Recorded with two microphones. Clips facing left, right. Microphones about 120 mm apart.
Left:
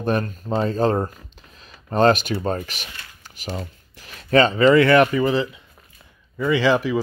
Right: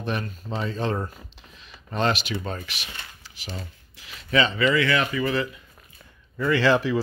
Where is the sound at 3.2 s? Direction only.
50° left (ahead or behind).